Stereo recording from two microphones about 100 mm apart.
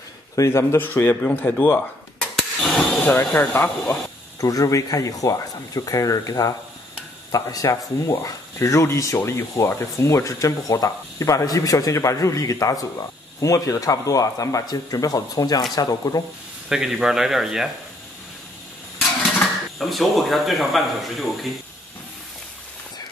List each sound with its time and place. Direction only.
0.4 s a man's voice: 30° left (ahead or behind)
2.3 s a sound: 5° left (ahead or behind)
3.3 s a man's voice: 20° left (ahead or behind)
4.4 s speech: 35° left (ahead or behind)
16.6 s speech: 5° right (ahead or behind)
19.8 s speech: centre (ahead or behind)